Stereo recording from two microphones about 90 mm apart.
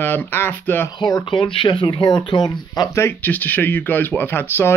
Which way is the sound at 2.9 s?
25° left (ahead or behind).